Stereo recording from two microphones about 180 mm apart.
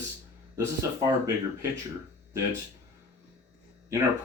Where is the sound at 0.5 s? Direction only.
15° right (ahead or behind).